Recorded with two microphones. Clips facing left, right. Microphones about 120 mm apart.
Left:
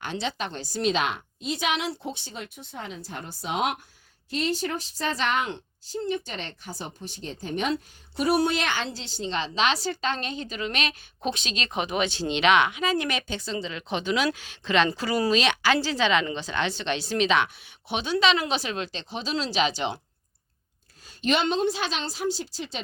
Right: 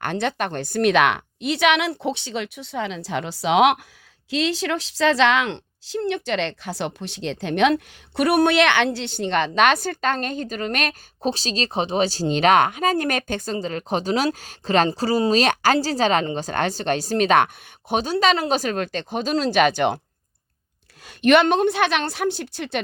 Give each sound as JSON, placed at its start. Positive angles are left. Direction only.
{"t": 0.0, "sound": "a woman's voice", "side_deg": -55}
{"t": 11.3, "sound": "speech", "side_deg": -35}
{"t": 21.0, "sound": "a woman's voice", "side_deg": -65}